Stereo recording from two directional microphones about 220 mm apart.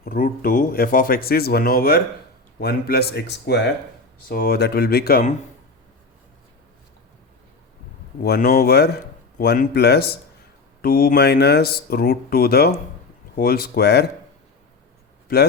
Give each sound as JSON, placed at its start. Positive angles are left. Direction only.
{"t": 0.0, "sound": "speech", "side_deg": 40}
{"t": 8.2, "sound": "speech", "side_deg": 45}
{"t": 15.3, "sound": "speech", "side_deg": 45}